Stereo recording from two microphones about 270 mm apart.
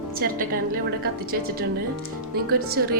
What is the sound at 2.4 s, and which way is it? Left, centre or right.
Speech, right.